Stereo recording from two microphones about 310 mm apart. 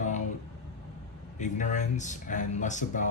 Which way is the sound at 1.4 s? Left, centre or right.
Left.